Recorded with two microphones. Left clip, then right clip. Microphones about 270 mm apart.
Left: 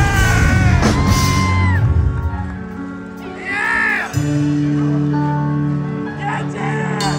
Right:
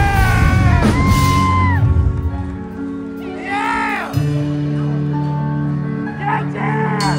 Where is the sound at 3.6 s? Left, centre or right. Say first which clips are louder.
Left 3 dB; right.